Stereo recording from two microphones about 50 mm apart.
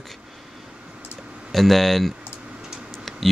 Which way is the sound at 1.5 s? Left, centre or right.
Centre.